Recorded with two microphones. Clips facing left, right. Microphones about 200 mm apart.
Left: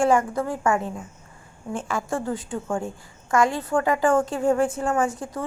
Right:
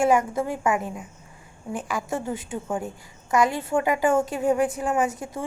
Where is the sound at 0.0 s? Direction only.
20° right (ahead or behind).